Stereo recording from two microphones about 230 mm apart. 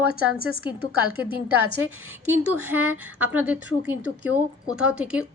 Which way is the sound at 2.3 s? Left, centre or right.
Centre.